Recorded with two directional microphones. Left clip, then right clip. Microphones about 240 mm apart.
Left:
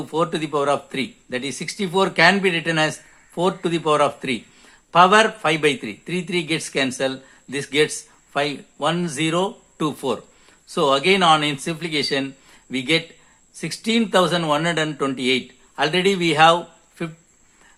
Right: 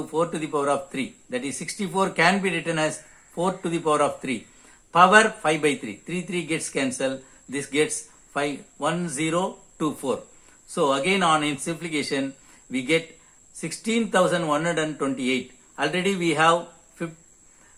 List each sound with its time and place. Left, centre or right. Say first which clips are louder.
0.1 s a man's voice: left 4 dB; left